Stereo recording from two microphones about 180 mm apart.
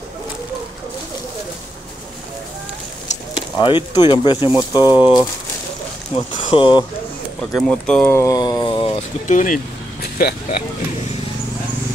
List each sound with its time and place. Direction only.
3.3 s speech: 25° left (ahead or behind)
7.5 s speech: 5° left (ahead or behind); by 9.0 s 30° left (ahead or behind)
9.3 s speech: 45° left (ahead or behind)
10.0 s a sound: 60° left (ahead or behind)